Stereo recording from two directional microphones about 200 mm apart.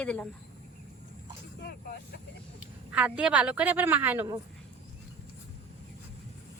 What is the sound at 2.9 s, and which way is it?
A woman's voice, 5° right (ahead or behind).